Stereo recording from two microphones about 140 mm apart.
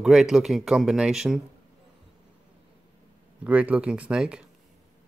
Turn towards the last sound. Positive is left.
turn(degrees=-5)  # may be behind; listen again after turning